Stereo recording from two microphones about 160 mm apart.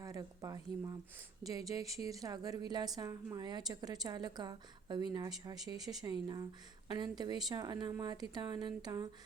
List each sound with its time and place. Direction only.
0.0 s a woman's voice: 20° right (ahead or behind)